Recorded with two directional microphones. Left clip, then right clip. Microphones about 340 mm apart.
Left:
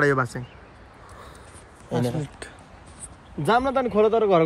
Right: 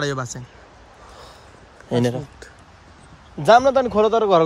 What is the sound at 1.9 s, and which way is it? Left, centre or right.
Speech, right.